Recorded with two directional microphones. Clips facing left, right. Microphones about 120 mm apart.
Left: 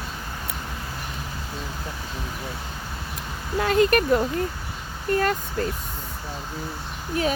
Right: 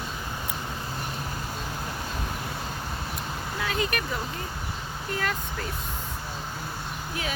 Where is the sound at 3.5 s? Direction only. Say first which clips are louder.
Left 11 dB; 50° left (ahead or behind).